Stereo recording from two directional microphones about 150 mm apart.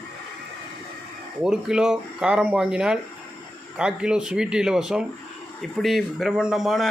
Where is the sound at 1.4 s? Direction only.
5° right (ahead or behind).